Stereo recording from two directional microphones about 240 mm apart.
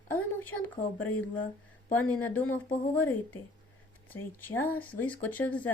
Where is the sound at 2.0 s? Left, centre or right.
Centre.